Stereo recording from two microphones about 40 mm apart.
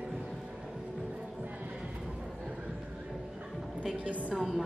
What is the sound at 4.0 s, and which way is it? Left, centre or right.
Speech, right.